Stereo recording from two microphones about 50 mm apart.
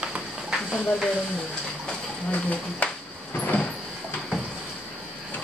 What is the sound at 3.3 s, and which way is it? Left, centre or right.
Vehicle, left.